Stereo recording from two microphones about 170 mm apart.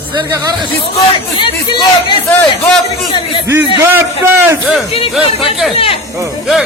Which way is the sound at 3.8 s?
15° right (ahead or behind).